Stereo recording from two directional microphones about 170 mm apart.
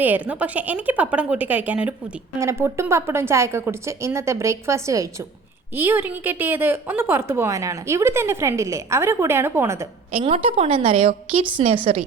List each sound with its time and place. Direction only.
0.0 s a woman's voice: 10° right (ahead or behind)
10.2 s a woman's voice: 35° right (ahead or behind)